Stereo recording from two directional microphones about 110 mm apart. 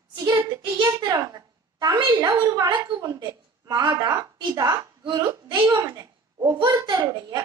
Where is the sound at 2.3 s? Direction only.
30° right (ahead or behind).